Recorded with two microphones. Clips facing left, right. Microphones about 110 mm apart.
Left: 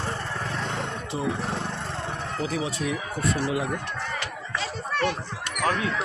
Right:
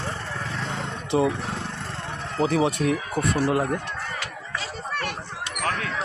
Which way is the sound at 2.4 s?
65° right (ahead or behind).